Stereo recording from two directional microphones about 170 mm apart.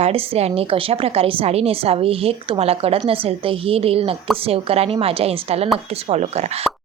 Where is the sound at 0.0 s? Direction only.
35° right (ahead or behind).